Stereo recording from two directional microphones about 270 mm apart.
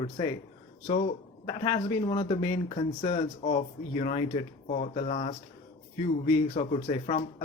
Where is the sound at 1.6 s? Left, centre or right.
Centre.